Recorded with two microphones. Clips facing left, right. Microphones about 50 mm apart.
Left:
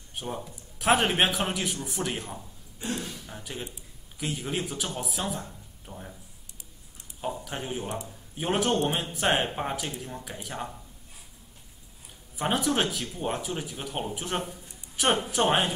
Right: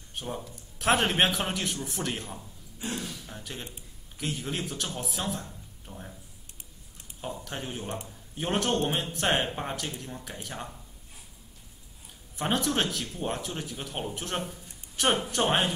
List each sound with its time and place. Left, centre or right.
0.1 s speech: centre
2.9 s a sound: centre
4.2 s a man's voice: centre
7.2 s a man's voice: centre
12.4 s speech: centre